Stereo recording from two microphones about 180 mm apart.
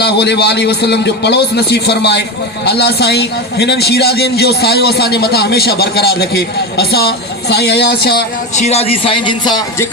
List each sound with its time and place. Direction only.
0.0 s a man's voice: 65° left (ahead or behind)
8.5 s speech: 35° left (ahead or behind)